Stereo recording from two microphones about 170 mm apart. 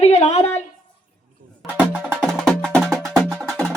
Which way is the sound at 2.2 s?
5° left (ahead or behind).